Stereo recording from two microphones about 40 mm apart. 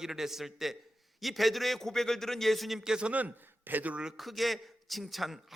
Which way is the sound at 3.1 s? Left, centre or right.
Right.